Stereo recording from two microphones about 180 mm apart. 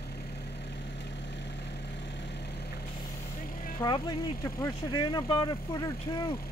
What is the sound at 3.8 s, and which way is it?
Speech, 20° left (ahead or behind).